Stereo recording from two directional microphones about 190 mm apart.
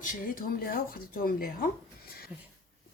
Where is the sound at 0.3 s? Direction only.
50° left (ahead or behind).